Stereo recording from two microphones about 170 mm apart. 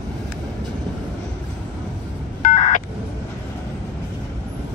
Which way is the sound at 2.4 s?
50° left (ahead or behind).